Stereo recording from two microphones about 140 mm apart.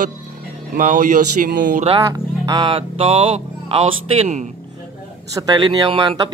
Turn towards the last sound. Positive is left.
turn(degrees=-35)  # may be behind; listen again after turning